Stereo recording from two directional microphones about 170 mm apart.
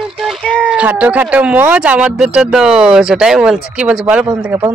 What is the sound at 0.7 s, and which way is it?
Speech, 10° right (ahead or behind).